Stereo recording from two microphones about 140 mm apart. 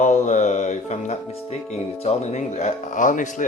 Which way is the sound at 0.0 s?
60° left (ahead or behind).